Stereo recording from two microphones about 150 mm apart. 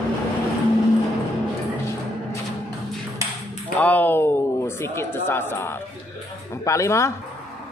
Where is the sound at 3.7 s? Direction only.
10° left (ahead or behind).